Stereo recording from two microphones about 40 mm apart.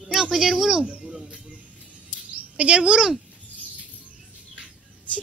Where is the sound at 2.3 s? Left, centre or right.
Right.